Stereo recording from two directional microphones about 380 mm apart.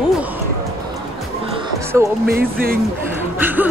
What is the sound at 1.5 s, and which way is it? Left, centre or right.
Music, centre.